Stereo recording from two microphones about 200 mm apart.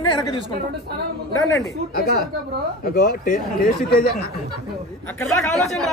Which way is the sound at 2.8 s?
50° left (ahead or behind).